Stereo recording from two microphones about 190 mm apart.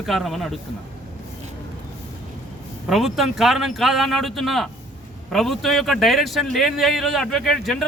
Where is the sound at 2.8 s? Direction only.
Centre (ahead or behind).